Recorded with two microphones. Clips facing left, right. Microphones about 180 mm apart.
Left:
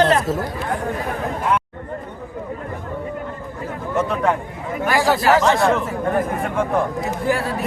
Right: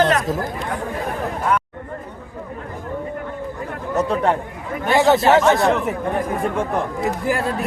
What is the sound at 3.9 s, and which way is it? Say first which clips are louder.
Speech: right 1 dB; 30° right (ahead or behind).